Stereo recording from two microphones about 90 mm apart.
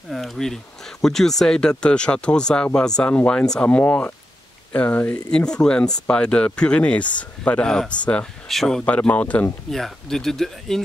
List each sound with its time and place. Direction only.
0.1 s speech: centre (ahead or behind); by 5.2 s 20° left (ahead or behind)
5.3 s speech: 10° left (ahead or behind)
9.7 s speech: 5° left (ahead or behind)